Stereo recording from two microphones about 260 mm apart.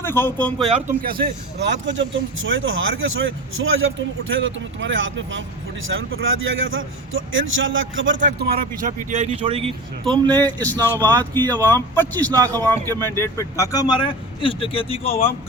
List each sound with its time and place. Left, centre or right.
0.0 s speech: centre
1.0 s a man's voice: right; by 10.4 s centre
10.4 s speech: centre
11.1 s speech: centre
11.4 s speech: centre
12.3 s speech: centre
13.1 s speech: centre